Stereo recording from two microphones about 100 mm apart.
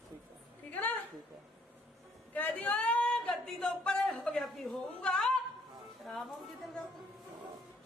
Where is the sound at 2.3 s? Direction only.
15° left (ahead or behind).